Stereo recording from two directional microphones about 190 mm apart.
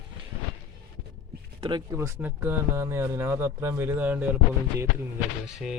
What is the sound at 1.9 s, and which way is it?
Speech, 15° right (ahead or behind).